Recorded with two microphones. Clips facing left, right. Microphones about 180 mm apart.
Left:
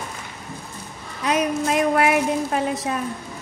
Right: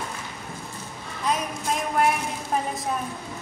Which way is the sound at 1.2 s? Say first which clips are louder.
Left 6 dB; 75° left (ahead or behind).